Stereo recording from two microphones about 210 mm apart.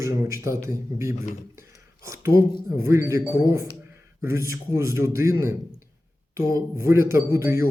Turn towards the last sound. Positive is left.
turn(degrees=-15)  # may be behind; listen again after turning